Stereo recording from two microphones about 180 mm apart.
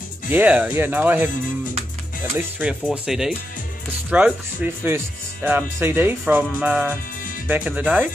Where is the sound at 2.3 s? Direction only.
10° right (ahead or behind).